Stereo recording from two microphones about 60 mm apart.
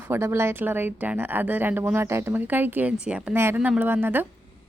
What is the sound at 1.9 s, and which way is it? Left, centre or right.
Speech, right.